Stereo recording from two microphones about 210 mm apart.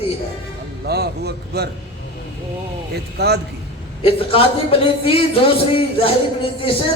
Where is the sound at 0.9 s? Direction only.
50° right (ahead or behind).